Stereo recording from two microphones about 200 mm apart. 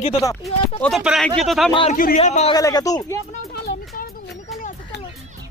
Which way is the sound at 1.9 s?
40° left (ahead or behind).